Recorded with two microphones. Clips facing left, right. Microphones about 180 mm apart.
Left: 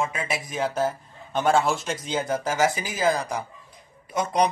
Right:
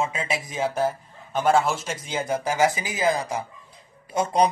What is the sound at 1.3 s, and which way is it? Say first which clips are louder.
Speech: right 1 dB; 5° right (ahead or behind).